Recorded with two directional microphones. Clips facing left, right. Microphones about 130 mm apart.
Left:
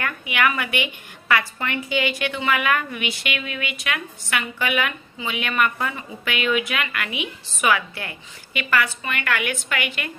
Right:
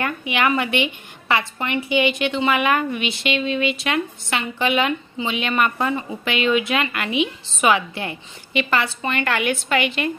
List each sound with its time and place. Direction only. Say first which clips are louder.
0.0 s a woman's voice: right 2 dB; 25° right (ahead or behind)